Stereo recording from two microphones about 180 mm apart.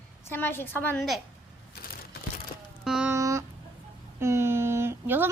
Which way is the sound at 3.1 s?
15° right (ahead or behind).